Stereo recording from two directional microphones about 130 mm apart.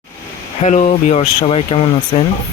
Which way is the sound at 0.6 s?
65° left (ahead or behind).